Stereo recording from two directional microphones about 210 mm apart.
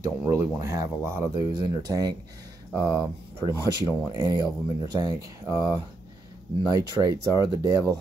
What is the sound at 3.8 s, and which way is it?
Speech, 15° right (ahead or behind).